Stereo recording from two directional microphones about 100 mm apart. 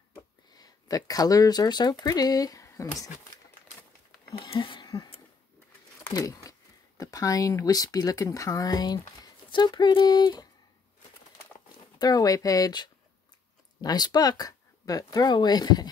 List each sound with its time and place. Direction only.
0.1 s speech: 40° left (ahead or behind)
4.5 s speech: 55° left (ahead or behind)
6.0 s a sound: 35° left (ahead or behind)
7.0 s speech: 35° left (ahead or behind)
12.0 s speech: 40° left (ahead or behind)